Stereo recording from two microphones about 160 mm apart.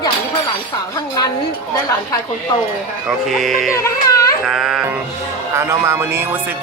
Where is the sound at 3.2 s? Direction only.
Centre (ahead or behind).